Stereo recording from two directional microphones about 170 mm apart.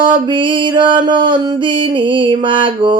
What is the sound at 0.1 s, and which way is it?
Mantra, 30° right (ahead or behind).